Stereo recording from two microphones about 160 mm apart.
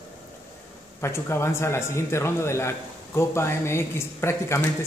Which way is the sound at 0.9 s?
15° left (ahead or behind).